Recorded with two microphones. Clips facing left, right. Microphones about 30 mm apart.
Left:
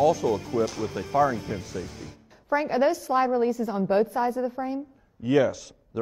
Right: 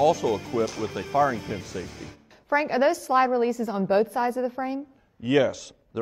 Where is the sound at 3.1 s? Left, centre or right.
Centre.